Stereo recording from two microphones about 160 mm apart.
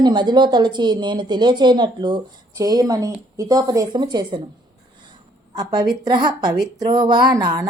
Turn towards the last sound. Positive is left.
turn(degrees=-25)  # may be behind; listen again after turning